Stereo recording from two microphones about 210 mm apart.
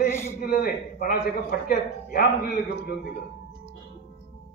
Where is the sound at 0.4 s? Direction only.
45° left (ahead or behind).